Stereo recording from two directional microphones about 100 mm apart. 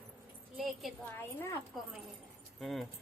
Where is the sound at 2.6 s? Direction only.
Centre (ahead or behind).